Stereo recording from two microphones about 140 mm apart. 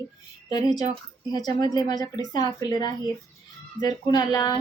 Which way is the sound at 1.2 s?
30° left (ahead or behind).